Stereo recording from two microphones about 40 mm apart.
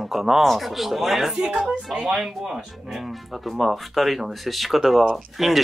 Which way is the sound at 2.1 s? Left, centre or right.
Centre.